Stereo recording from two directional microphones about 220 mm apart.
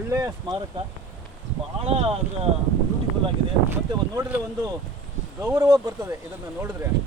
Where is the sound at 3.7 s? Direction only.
10° right (ahead or behind).